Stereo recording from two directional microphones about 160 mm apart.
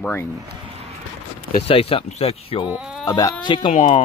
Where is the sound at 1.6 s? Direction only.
35° left (ahead or behind).